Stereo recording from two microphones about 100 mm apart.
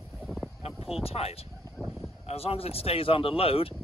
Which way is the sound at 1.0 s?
80° left.